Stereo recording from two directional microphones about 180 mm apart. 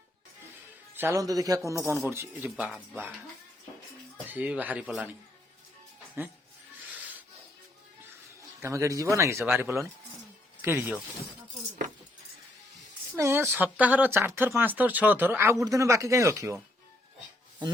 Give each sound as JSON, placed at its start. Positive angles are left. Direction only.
{"t": 0.9, "sound": "speech", "side_deg": -15}
{"t": 4.3, "sound": "speech", "side_deg": -10}
{"t": 8.6, "sound": "speech", "side_deg": -15}
{"t": 13.1, "sound": "speech", "side_deg": -15}